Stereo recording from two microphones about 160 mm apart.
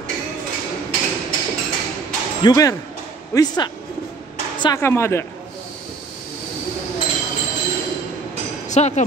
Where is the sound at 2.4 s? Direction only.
20° left (ahead or behind).